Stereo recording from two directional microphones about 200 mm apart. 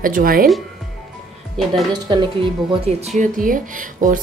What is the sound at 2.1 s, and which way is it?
Speech, 25° right (ahead or behind).